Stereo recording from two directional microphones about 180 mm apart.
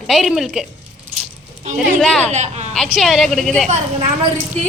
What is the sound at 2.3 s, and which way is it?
Speech, 40° right (ahead or behind).